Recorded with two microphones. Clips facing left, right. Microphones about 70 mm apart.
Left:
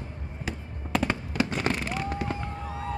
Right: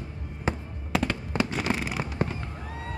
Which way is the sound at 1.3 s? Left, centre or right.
Right.